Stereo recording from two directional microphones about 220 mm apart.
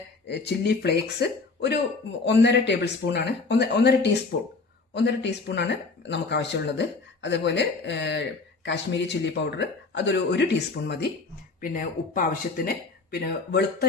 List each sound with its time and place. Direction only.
0.3 s speech: 50° left (ahead or behind)
11.6 s speech: 40° left (ahead or behind)